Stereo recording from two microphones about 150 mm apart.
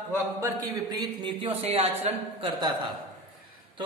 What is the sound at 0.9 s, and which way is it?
Speech, 35° right (ahead or behind).